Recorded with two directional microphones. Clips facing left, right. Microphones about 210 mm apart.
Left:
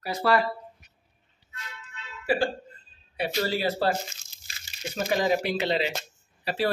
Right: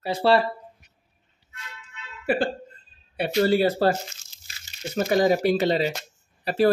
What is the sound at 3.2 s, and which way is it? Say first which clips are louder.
Speech: right 7 dB; 50° right (ahead or behind).